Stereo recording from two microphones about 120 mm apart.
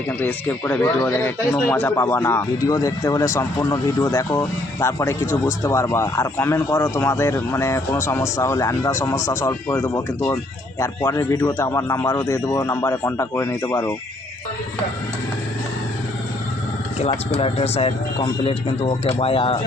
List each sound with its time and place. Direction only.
0.2 s speech: 15° left (ahead or behind)
17.1 s speech: 50° left (ahead or behind)